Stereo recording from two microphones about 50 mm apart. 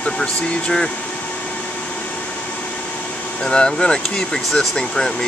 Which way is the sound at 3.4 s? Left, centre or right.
Centre.